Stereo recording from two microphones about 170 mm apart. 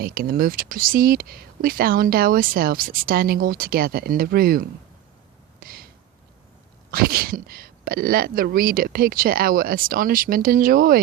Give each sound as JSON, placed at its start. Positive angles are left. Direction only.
{"t": 0.0, "sound": "speech", "side_deg": -60}
{"t": 5.5, "sound": "a sound", "side_deg": -60}
{"t": 6.9, "sound": "speech", "side_deg": -60}